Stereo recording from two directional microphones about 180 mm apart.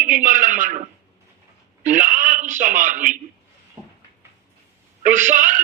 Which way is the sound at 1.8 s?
45° right (ahead or behind).